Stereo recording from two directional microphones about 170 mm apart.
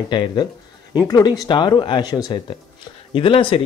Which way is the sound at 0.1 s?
25° left (ahead or behind).